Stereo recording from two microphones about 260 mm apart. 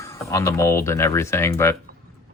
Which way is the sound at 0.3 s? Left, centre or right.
Centre.